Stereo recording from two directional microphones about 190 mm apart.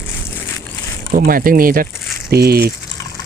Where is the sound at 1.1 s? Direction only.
50° right (ahead or behind).